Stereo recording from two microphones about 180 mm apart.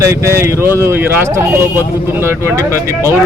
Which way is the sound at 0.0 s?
15° right (ahead or behind).